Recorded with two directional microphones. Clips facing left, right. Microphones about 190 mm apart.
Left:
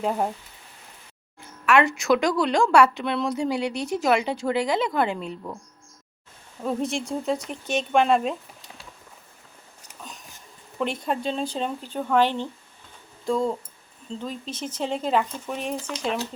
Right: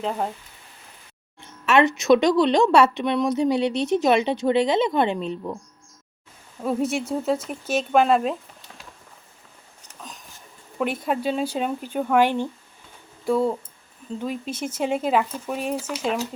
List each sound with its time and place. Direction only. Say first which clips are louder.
0.0 s speech: left 1 dB; 10° left (ahead or behind)
1.4 s speech: right 2 dB; 20° right (ahead or behind)
6.6 s speech: right 3 dB; 5° right (ahead or behind)
10.0 s a sound: right 1 dB; centre (ahead or behind)
10.8 s speech: right 2 dB; 5° right (ahead or behind)